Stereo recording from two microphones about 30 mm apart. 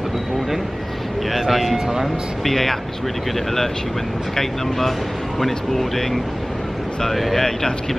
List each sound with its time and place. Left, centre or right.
1.3 s speech: centre
4.4 s speech: centre
7.3 s speech: left